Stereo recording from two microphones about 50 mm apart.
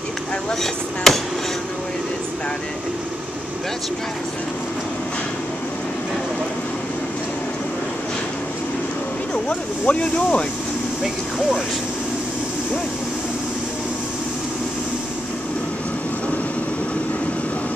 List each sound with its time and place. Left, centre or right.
1.1 s speech: centre
9.5 s speech: left